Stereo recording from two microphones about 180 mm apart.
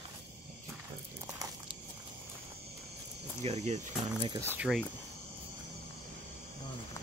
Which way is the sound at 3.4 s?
40° right (ahead or behind).